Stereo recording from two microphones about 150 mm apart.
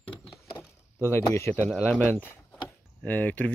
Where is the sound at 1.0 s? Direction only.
15° left (ahead or behind).